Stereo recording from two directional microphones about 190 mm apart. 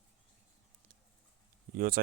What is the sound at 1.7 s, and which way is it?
Speech, 50° right (ahead or behind).